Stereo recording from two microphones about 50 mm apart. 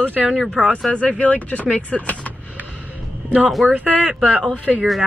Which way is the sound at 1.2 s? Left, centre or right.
Left.